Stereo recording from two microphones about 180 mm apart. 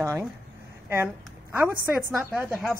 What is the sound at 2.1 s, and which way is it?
Speech, 5° right (ahead or behind).